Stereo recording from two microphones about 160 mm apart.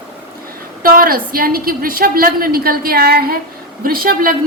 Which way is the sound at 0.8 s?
65° right (ahead or behind).